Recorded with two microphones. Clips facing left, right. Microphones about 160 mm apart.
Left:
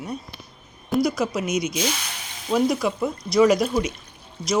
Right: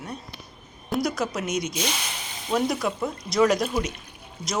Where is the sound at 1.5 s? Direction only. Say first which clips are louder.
Left 3 dB; 40° right (ahead or behind).